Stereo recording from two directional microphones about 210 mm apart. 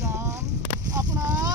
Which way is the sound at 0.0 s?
15° right (ahead or behind).